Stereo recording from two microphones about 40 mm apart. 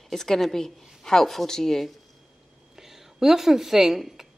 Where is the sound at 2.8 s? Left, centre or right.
Centre.